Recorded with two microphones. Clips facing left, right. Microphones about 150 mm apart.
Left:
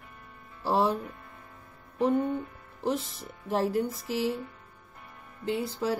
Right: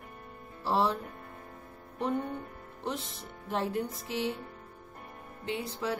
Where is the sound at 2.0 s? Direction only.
35° left (ahead or behind).